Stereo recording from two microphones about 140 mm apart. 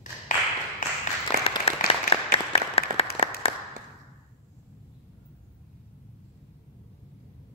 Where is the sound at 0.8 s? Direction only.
70° left (ahead or behind).